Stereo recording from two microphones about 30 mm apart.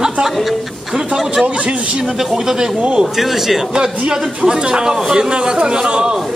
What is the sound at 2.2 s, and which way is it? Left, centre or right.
Speech, centre.